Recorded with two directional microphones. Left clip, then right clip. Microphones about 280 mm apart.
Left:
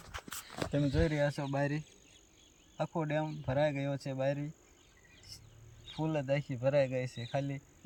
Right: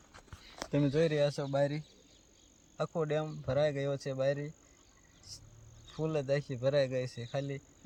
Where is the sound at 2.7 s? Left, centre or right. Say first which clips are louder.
Right 1 dB; centre.